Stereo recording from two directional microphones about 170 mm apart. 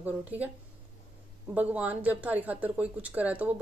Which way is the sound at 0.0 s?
10° right (ahead or behind).